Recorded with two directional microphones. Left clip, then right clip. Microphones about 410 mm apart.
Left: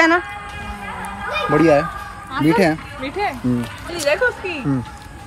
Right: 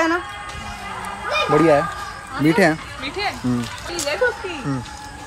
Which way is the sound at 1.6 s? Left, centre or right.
Centre.